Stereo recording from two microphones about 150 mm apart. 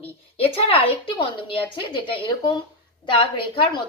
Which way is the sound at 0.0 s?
40° left (ahead or behind).